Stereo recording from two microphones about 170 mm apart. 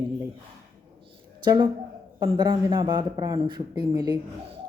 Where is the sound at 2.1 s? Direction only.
20° right (ahead or behind).